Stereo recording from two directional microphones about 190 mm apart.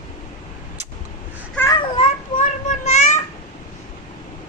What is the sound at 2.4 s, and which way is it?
Child singing, 35° left (ahead or behind).